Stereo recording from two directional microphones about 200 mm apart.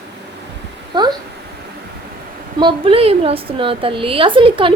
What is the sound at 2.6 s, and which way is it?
A woman's voice, 25° right (ahead or behind).